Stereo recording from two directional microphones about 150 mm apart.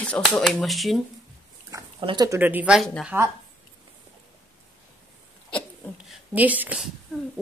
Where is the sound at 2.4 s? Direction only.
10° right (ahead or behind).